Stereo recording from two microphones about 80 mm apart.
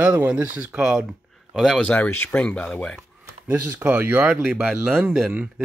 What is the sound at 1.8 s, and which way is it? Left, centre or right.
Speech, centre.